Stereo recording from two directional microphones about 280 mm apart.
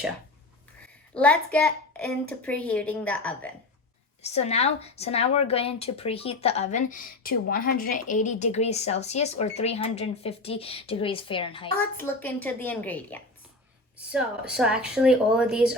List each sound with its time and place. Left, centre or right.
1.1 s a child's voice: centre
4.2 s a woman's voice: left
11.8 s a child's voice: centre